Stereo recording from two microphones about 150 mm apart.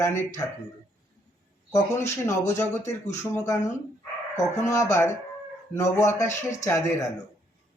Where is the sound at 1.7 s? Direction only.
15° left (ahead or behind).